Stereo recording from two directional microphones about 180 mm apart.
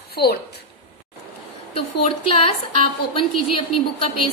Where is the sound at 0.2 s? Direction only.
65° left (ahead or behind).